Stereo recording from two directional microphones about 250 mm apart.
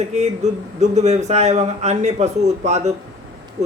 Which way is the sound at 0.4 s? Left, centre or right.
Right.